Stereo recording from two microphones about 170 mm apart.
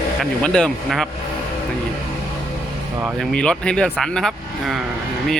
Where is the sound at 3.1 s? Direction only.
5° left (ahead or behind).